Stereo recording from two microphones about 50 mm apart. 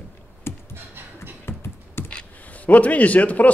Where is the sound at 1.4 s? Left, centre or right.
Left.